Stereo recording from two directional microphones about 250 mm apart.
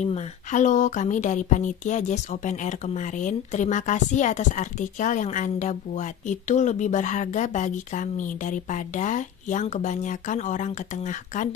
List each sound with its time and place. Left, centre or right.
0.0 s a woman's voice: left